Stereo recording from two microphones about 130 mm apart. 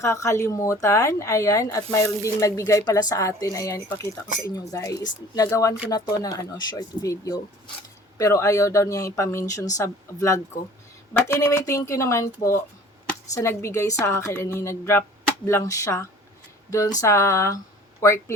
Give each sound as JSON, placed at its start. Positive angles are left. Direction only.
{"t": 0.0, "sound": "speech", "side_deg": 20}